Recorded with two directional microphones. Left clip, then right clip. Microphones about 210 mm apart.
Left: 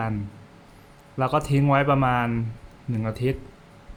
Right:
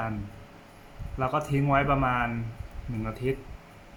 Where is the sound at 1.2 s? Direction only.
50° left (ahead or behind).